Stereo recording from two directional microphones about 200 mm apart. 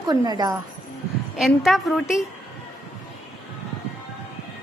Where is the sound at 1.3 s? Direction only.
Centre (ahead or behind).